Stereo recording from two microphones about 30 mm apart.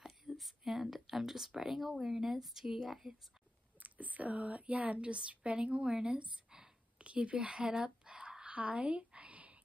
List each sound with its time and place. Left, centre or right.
0.4 s a woman's voice: centre
3.8 s speech: right
5.0 s a woman's voice: right
9.3 s whispering: right